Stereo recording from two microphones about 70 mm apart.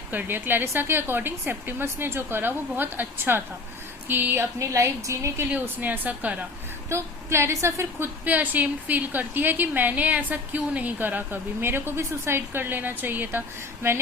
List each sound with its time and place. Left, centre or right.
0.1 s a woman's voice: right
4.6 s a woman's voice: right
5.5 s a woman's voice: right
6.9 s a woman's voice: right